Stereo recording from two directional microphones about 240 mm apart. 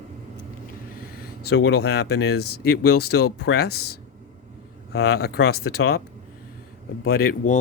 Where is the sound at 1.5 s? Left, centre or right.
Left.